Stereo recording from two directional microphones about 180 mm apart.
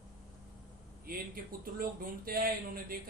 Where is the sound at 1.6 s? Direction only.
55° right (ahead or behind).